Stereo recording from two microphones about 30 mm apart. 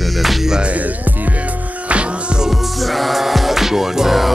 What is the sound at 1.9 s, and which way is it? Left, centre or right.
Music, right.